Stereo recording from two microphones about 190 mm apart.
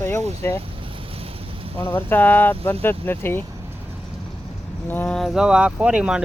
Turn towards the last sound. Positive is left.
turn(degrees=-5)  # may be behind; listen again after turning